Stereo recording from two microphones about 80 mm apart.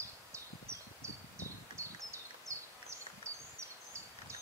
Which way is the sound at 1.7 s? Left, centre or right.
Right.